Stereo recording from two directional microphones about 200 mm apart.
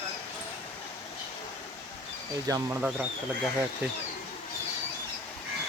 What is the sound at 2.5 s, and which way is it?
Speech, 15° right (ahead or behind).